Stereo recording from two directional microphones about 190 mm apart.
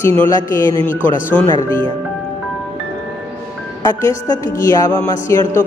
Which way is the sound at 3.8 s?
20° left (ahead or behind).